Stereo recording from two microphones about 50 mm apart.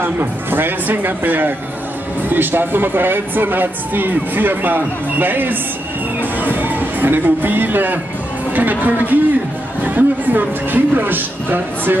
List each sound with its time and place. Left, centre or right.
0.0 s a man's voice: right